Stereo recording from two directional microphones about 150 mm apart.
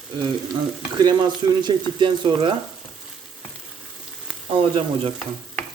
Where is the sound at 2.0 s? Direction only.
35° right (ahead or behind).